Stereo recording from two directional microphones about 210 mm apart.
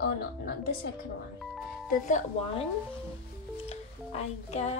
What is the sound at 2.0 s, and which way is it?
Speech, 35° left (ahead or behind).